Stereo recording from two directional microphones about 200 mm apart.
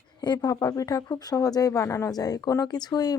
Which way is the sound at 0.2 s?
20° left (ahead or behind).